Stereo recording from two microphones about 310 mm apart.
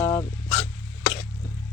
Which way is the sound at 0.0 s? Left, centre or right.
Centre.